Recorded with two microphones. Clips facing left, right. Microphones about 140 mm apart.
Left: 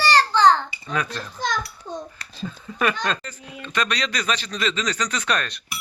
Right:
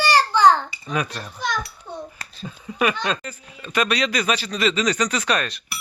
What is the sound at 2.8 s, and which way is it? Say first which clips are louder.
A man's voice: right 1 dB; 10° right (ahead or behind).